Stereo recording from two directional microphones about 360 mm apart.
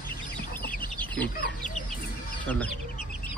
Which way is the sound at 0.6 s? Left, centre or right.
Centre.